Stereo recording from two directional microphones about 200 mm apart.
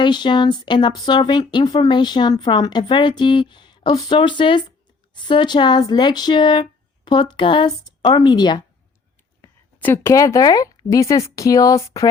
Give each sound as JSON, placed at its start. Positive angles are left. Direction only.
{"t": 0.0, "sound": "a woman's voice", "side_deg": 20}